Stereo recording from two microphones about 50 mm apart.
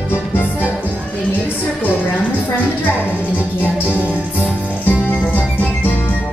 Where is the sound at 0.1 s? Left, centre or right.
Left.